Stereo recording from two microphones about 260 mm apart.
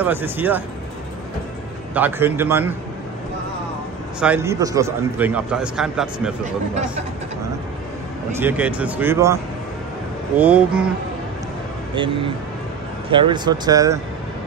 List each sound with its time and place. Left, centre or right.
0.0 s speech: centre
2.0 s speech: centre
4.2 s a man's voice: centre
8.4 s a man's voice: centre
13.1 s speech: centre